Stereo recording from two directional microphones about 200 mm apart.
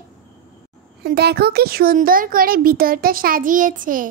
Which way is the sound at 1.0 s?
55° right (ahead or behind).